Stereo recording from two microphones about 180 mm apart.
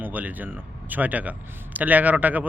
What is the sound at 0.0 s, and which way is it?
A man's voice, 10° right (ahead or behind).